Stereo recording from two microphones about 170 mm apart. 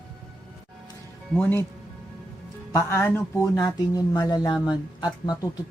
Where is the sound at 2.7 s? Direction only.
10° left (ahead or behind).